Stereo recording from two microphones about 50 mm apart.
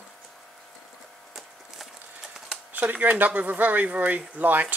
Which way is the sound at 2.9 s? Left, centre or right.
Right.